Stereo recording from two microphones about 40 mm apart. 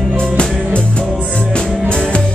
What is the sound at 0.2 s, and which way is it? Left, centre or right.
Music, left.